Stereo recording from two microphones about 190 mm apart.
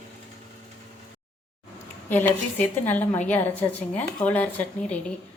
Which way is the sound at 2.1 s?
10° left (ahead or behind).